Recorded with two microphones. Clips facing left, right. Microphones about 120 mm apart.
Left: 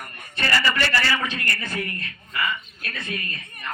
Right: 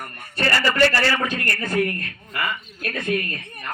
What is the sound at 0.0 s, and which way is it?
A man's voice, 45° right (ahead or behind).